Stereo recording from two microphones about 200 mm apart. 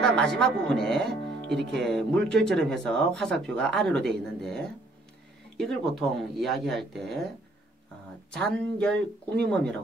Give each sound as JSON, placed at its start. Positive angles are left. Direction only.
{"t": 0.0, "sound": "speech", "side_deg": 5}
{"t": 1.5, "sound": "music", "side_deg": -60}
{"t": 1.8, "sound": "speech", "side_deg": 5}
{"t": 8.3, "sound": "speech", "side_deg": 5}